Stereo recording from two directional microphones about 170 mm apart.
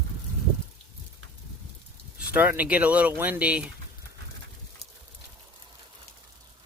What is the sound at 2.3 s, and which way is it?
Speech, 10° right (ahead or behind).